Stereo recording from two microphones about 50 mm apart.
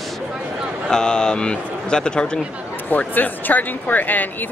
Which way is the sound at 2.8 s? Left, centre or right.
Left.